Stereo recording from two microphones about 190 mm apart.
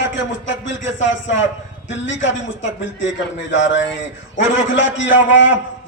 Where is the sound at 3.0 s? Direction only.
75° left (ahead or behind).